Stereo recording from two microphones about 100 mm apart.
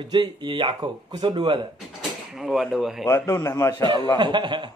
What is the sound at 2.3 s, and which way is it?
Speech, 5° right (ahead or behind).